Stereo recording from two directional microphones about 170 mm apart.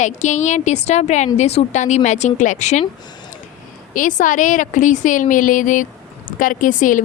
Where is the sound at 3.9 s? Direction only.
50° left (ahead or behind).